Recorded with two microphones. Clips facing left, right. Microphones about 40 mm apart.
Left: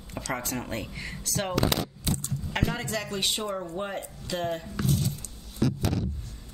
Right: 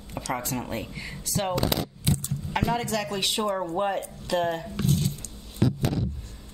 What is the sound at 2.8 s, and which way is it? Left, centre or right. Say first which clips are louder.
Speech: right 4 dB; centre.